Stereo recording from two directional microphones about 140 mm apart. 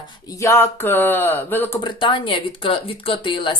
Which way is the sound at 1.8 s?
35° left (ahead or behind).